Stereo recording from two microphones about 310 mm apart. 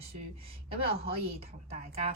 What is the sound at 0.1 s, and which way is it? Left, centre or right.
A woman's voice, centre.